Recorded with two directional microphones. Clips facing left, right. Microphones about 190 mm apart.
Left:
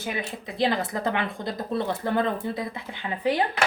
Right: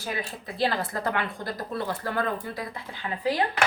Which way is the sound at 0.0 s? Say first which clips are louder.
Left 2 dB; 20° left (ahead or behind).